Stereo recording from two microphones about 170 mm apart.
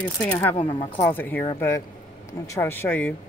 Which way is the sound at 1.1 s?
10° left (ahead or behind).